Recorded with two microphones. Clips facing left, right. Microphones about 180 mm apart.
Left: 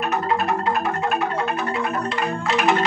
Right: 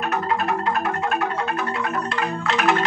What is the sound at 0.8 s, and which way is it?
Music, 5° left (ahead or behind).